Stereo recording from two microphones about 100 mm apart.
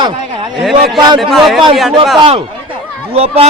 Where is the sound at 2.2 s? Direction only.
65° right (ahead or behind); by 3.5 s 80° right.